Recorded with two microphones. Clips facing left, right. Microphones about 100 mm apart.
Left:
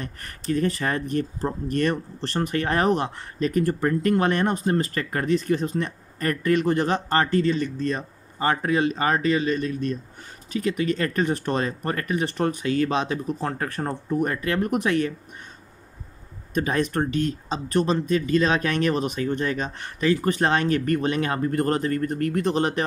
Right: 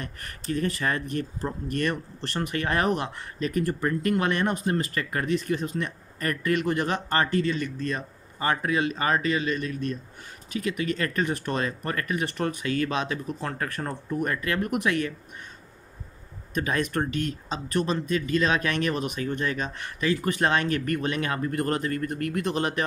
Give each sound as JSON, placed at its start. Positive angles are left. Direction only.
{"t": 0.0, "sound": "speech", "side_deg": 35}
{"t": 16.5, "sound": "speech", "side_deg": 35}